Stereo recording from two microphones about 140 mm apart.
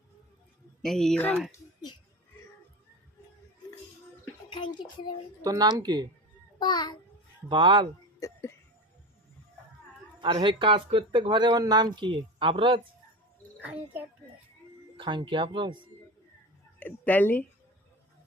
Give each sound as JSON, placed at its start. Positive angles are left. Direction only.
{"t": 0.8, "sound": "speech", "side_deg": 5}
{"t": 4.4, "sound": "a sound", "side_deg": 35}
{"t": 5.4, "sound": "speech", "side_deg": -25}
{"t": 6.6, "sound": "a sound", "side_deg": 30}
{"t": 7.4, "sound": "speech", "side_deg": -35}
{"t": 8.2, "sound": "music", "side_deg": 20}
{"t": 10.2, "sound": "speech", "side_deg": -35}
{"t": 13.6, "sound": "speech", "side_deg": -10}
{"t": 14.9, "sound": "speech", "side_deg": -35}
{"t": 16.8, "sound": "a woman's voice", "side_deg": 10}